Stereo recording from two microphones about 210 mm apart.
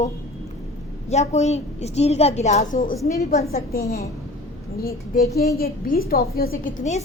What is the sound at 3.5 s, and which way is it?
Speech, 45° left (ahead or behind).